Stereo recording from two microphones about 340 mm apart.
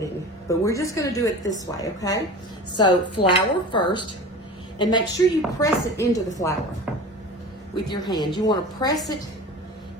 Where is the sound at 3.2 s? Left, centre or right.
Centre.